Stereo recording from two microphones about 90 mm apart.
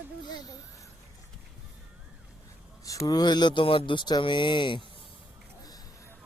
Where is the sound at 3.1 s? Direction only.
50° left (ahead or behind).